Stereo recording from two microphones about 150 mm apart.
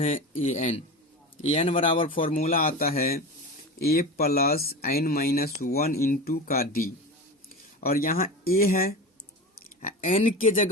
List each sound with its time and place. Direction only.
0.1 s speech: 50° left (ahead or behind)
1.5 s speech: 40° left (ahead or behind)
2.1 s speech: 65° left (ahead or behind)
9.6 s a sound: 65° left (ahead or behind)
10.2 s speech: 60° left (ahead or behind)